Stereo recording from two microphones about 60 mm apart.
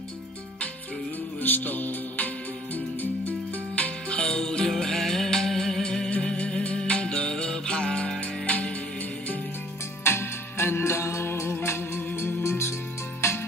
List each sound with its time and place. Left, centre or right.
1.4 s music: left
4.4 s music: centre; by 8.7 s left
10.0 s music: left
12.1 s music: left